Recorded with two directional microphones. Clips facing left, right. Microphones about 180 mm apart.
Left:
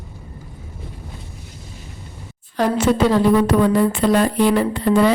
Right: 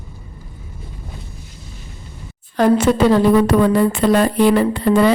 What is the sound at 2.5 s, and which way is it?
Speech, 55° right (ahead or behind).